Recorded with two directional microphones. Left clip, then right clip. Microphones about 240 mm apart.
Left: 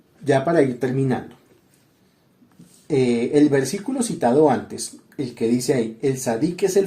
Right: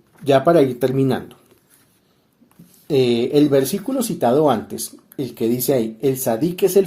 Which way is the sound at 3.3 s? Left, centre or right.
Right.